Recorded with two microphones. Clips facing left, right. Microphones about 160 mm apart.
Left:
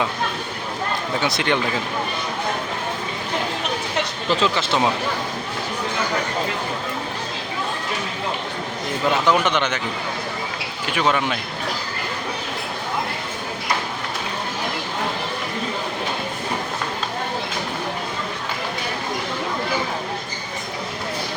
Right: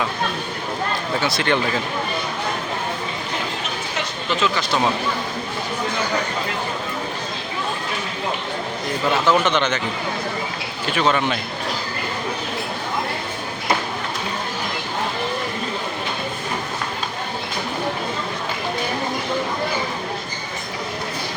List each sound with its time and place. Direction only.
1.2 s speech: 20° left (ahead or behind)
4.3 s speech: 30° left (ahead or behind)
9.2 s speech: 10° left (ahead or behind)
10.9 s speech: 10° left (ahead or behind)